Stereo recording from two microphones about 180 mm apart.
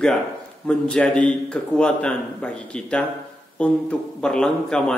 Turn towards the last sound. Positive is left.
turn(degrees=5)  # may be behind; listen again after turning